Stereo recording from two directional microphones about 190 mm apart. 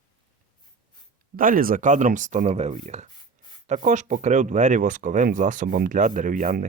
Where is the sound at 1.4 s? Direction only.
45° right (ahead or behind).